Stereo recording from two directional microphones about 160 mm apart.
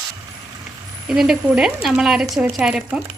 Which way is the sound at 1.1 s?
5° right (ahead or behind).